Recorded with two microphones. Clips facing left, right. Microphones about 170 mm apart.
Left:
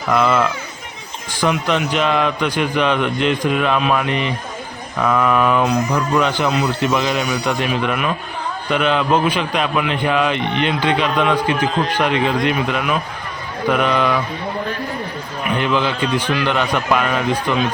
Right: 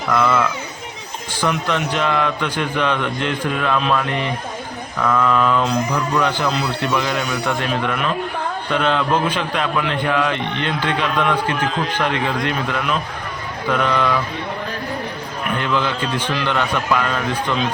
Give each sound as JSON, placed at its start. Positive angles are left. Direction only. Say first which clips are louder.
{"t": 0.1, "sound": "speech", "louder": "left 2 dB", "side_deg": 20}
{"t": 15.5, "sound": "speech", "louder": "left 3 dB", "side_deg": 15}